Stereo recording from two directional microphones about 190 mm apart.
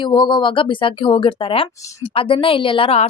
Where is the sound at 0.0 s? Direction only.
25° left (ahead or behind).